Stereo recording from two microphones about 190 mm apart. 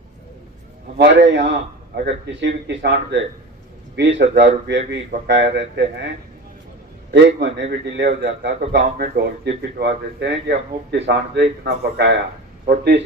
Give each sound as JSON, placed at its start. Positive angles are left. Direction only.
{"t": 0.9, "sound": "speech", "side_deg": -65}
{"t": 7.1, "sound": "speech", "side_deg": -65}